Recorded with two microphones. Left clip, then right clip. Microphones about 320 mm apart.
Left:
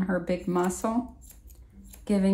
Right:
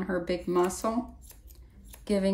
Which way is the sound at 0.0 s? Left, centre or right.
Centre.